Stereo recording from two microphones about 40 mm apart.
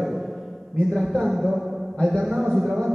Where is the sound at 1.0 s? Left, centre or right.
Centre.